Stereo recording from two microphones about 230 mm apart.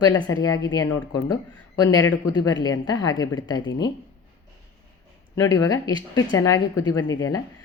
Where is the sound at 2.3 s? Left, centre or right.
Centre.